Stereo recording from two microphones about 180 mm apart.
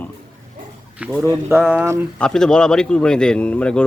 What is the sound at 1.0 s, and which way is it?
Speech, 10° right (ahead or behind).